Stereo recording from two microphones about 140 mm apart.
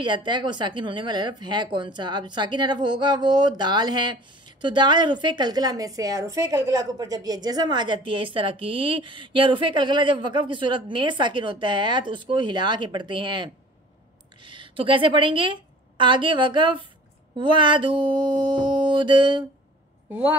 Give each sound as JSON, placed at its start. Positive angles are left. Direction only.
{"t": 0.0, "sound": "a woman's voice", "side_deg": -35}
{"t": 20.1, "sound": "a woman's voice", "side_deg": -10}